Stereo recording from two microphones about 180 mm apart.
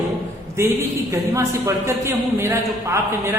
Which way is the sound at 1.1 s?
15° right (ahead or behind).